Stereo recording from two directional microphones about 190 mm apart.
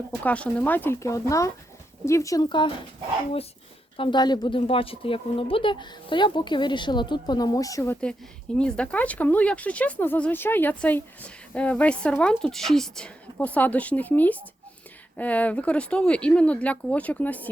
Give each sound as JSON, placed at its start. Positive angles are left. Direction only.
{"t": 0.3, "sound": "speech", "side_deg": 5}
{"t": 3.9, "sound": "speech", "side_deg": 25}
{"t": 8.5, "sound": "speech", "side_deg": 5}